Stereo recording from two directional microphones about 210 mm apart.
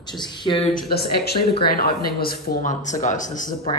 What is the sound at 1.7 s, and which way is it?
Speech, 45° left (ahead or behind).